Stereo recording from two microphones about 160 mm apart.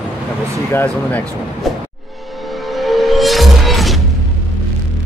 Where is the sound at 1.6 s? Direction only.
Centre (ahead or behind).